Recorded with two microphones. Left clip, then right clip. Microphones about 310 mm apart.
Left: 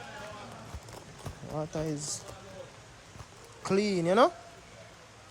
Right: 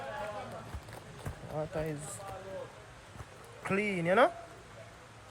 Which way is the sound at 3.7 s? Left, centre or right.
Left.